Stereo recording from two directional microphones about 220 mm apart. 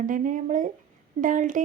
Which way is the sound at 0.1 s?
35° right (ahead or behind).